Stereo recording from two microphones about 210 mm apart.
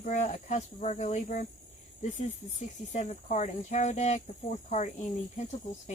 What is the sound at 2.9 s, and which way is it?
Speech, 35° left (ahead or behind).